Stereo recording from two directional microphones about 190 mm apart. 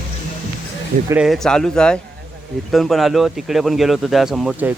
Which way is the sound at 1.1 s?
Centre (ahead or behind).